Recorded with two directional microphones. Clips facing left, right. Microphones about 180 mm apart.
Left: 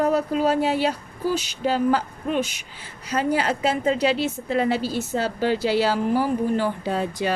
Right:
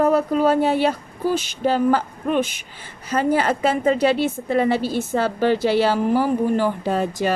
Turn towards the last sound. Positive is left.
turn(degrees=-45)  # may be behind; listen again after turning